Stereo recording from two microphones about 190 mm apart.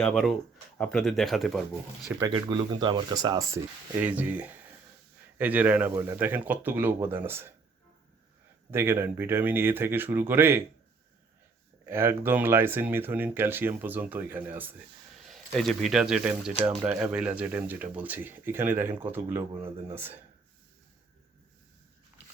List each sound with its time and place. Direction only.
0.0 s speech: centre (ahead or behind)
2.0 s speech: 10° right (ahead or behind)
2.3 s speech: 25° right (ahead or behind)
8.7 s speech: 15° right (ahead or behind)
11.9 s speech: 10° right (ahead or behind)
15.3 s speech: centre (ahead or behind)
22.2 s a sound: 10° right (ahead or behind)